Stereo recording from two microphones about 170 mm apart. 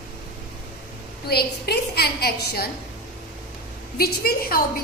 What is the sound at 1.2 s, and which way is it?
A woman's voice, 70° left (ahead or behind).